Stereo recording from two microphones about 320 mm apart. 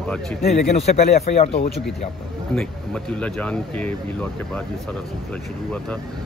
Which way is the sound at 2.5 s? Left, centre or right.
Centre.